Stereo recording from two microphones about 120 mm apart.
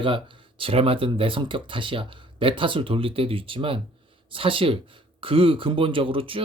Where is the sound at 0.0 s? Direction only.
45° right (ahead or behind).